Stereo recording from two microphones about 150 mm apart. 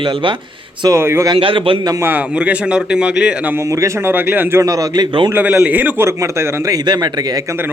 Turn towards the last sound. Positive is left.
turn(degrees=-20)  # may be behind; listen again after turning